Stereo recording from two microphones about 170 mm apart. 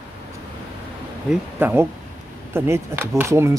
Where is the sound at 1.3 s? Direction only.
10° right (ahead or behind).